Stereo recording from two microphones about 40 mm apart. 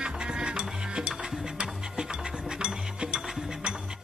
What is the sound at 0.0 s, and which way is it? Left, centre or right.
Music, right.